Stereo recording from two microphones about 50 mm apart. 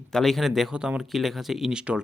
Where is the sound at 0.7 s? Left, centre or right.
Centre.